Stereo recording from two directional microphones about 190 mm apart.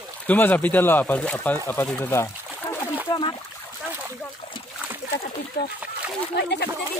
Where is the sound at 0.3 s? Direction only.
10° left (ahead or behind).